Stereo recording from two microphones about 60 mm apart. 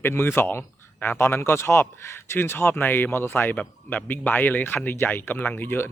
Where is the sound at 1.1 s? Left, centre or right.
Left.